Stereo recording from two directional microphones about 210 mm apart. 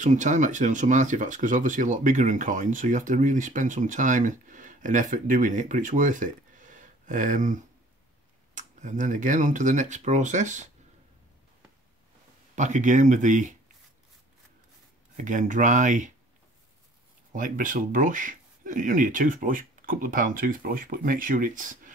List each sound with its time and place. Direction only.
0.0 s speech: 35° right (ahead or behind)
12.5 s speech: 35° right (ahead or behind)
15.1 s speech: 40° right (ahead or behind)
17.3 s speech: 40° right (ahead or behind)